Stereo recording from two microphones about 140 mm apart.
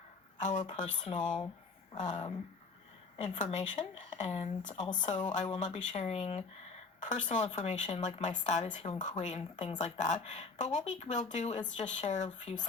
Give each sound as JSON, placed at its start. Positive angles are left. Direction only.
{"t": 0.3, "sound": "speech", "side_deg": 60}
{"t": 4.7, "sound": "speech", "side_deg": 30}
{"t": 5.0, "sound": "speech", "side_deg": 60}